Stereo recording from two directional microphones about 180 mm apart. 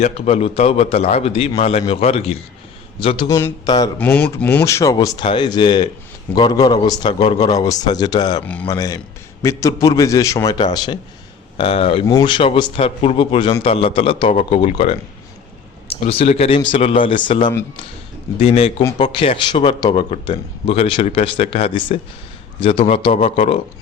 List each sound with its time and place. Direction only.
0.0 s a man's voice: 35° left (ahead or behind)
3.2 s speech: 15° left (ahead or behind)
3.9 s a man's voice: 5° left (ahead or behind); by 23.6 s 35° left (ahead or behind)